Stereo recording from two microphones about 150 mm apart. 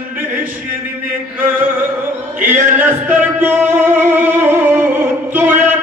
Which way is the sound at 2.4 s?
15° right (ahead or behind).